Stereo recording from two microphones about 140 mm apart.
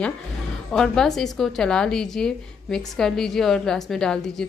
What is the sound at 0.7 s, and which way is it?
A woman's voice, 5° left (ahead or behind).